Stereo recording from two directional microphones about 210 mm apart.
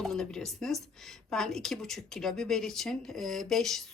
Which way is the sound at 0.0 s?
5° left (ahead or behind).